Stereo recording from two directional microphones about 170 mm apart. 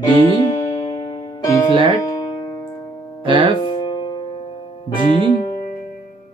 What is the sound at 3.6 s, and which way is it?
Music, 25° left (ahead or behind).